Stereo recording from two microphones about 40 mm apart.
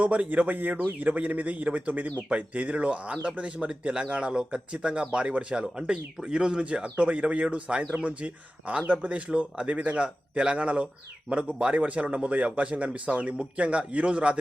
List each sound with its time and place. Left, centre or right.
0.0 s speech: right
2.3 s speech: right